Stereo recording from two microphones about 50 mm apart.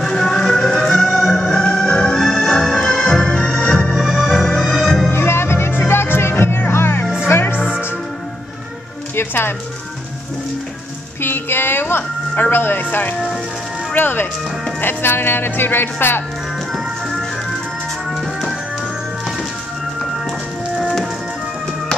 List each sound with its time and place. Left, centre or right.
0.0 s music: centre
3.9 s organ: centre
4.6 s music: centre
5.1 s music: left
7.5 s music: centre
9.1 s music: left
11.1 s music: left
13.9 s speech: left
18.1 s music: centre